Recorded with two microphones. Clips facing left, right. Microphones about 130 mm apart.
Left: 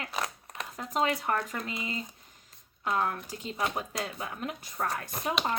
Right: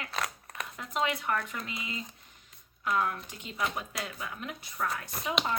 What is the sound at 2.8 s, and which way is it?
Speech, 35° left (ahead or behind).